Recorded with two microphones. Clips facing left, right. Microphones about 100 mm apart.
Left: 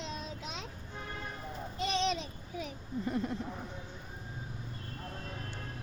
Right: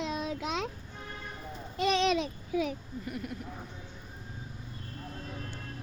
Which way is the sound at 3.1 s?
25° left (ahead or behind).